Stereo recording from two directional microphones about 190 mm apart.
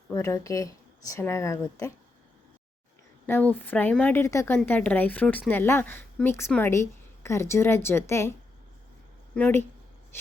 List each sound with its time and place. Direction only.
0.1 s a woman's voice: 15° left (ahead or behind)
3.2 s a woman's voice: 10° left (ahead or behind)